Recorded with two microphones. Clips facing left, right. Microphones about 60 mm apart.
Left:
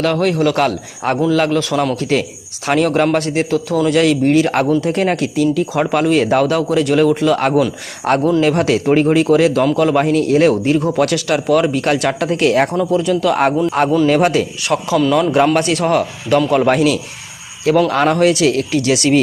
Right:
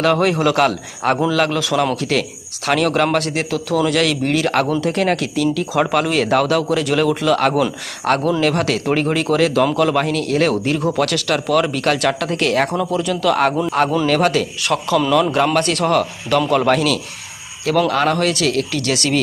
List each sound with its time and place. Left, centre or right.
0.0 s a man's voice: centre
2.0 s a man's voice: centre
12.9 s a man's voice: centre